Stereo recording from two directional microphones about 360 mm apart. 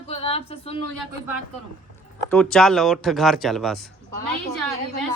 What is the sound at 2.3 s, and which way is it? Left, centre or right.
Speech, centre.